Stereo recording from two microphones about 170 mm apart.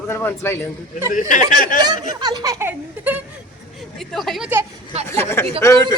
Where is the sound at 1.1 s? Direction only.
50° left (ahead or behind).